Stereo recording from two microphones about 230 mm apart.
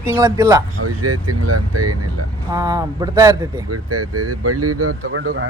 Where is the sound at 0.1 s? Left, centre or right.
Centre.